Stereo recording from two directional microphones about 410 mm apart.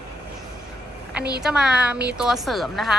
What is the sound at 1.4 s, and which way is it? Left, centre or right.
A woman's voice, centre.